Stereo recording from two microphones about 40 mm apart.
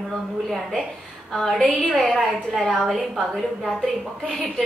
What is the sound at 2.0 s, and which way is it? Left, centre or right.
A woman's voice, centre.